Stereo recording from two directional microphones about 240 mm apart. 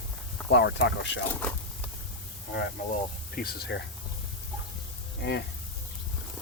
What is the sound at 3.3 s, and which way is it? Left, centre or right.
Speech, left.